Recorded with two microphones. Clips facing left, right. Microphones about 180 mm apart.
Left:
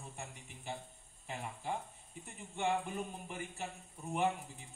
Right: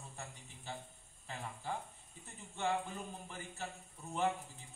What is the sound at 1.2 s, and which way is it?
Cricket, 20° left (ahead or behind).